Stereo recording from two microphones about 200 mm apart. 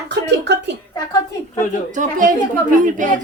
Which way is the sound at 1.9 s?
40° right (ahead or behind).